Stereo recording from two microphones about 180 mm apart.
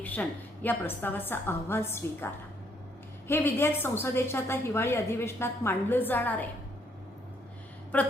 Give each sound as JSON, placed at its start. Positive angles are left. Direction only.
{"t": 0.0, "sound": "a woman's voice", "side_deg": 10}